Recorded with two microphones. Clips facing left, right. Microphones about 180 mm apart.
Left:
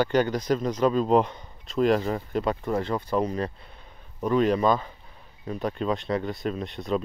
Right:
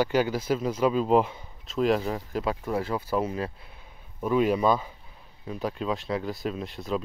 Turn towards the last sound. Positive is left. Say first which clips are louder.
# left 3 dB
turn(degrees=0)  # may be behind; listen again after turning